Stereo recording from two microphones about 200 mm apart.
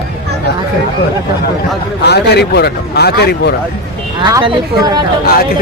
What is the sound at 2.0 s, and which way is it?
Speech, 55° left (ahead or behind).